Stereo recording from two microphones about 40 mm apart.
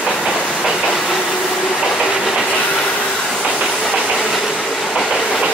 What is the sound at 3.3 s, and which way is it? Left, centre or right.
Train, centre.